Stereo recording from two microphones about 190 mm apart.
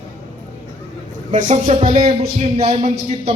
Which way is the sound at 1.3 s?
35° right (ahead or behind).